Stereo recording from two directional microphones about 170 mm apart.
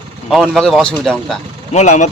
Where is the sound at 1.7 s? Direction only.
40° left (ahead or behind).